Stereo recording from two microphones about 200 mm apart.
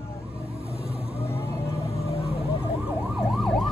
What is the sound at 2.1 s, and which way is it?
Emergency vehicle, 30° left (ahead or behind).